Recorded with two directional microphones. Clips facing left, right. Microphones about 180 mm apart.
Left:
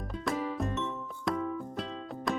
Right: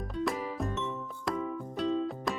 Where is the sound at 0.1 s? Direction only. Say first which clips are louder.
Even; centre (ahead or behind).